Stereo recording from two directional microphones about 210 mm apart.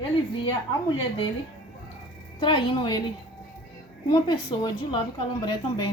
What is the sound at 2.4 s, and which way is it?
Speech, 25° left (ahead or behind).